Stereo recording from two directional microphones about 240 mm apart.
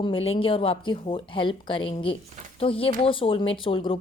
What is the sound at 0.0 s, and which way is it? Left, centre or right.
A woman's voice, left.